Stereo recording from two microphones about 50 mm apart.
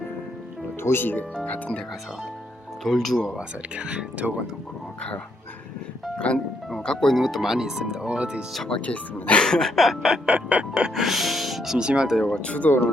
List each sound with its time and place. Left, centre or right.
0.8 s speech: left
1.5 s speech: left
2.8 s speech: centre
3.3 s speech: centre
6.1 s speech: left
6.8 s speech: centre
7.4 s speech: centre
8.7 s speech: left
9.4 s speech: centre
10.2 s speech: right
10.9 s speech: centre
11.8 s speech: centre
12.2 s speech: left